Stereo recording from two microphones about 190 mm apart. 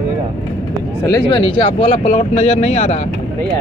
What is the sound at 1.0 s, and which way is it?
Speech, 20° left (ahead or behind).